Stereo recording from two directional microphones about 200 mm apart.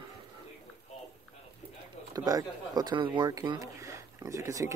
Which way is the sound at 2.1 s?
20° right (ahead or behind).